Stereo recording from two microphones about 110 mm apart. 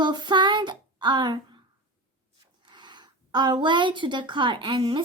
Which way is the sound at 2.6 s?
45° right (ahead or behind).